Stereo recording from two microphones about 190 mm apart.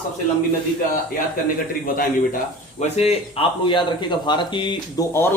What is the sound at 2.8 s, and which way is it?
Speech, 35° left (ahead or behind).